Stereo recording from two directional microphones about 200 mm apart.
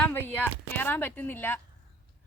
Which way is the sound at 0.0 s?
10° left (ahead or behind).